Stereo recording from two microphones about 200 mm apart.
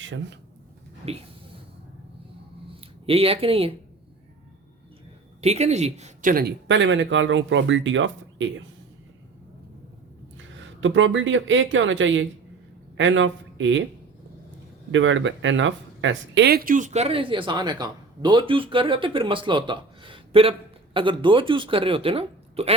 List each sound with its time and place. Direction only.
0.0 s speech: 70° right (ahead or behind)
1.0 s speech: 30° right (ahead or behind)
3.1 s speech: 30° right (ahead or behind)
5.4 s speech: 35° right (ahead or behind)
6.7 s speech: 65° right (ahead or behind)
10.3 s speech: 70° right (ahead or behind)
14.9 s speech: 70° right (ahead or behind); by 22.7 s 30° right (ahead or behind)